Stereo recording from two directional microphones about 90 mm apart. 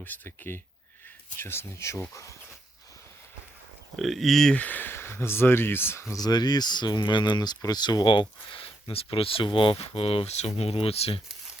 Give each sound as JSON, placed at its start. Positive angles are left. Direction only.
{"t": 0.0, "sound": "speech", "side_deg": 25}
{"t": 3.9, "sound": "speech", "side_deg": 0}
{"t": 4.5, "sound": "speech", "side_deg": 15}
{"t": 6.1, "sound": "speech", "side_deg": 50}